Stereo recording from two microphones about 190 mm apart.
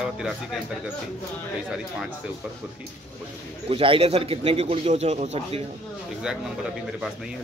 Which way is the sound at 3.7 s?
30° right (ahead or behind).